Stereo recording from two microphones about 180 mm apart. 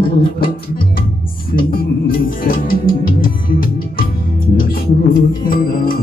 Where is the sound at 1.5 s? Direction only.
55° left (ahead or behind).